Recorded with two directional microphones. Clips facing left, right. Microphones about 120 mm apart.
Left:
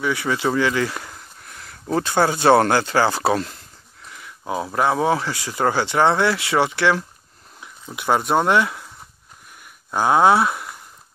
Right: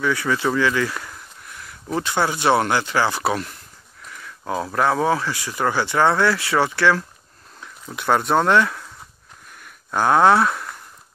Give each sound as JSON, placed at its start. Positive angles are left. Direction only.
{"t": 0.0, "sound": "speech", "side_deg": 20}
{"t": 4.1, "sound": "a sound", "side_deg": 15}
{"t": 4.7, "sound": "speech", "side_deg": 20}
{"t": 9.8, "sound": "speech", "side_deg": 10}